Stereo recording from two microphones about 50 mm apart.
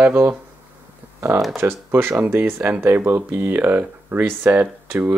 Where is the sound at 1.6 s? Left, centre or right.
Right.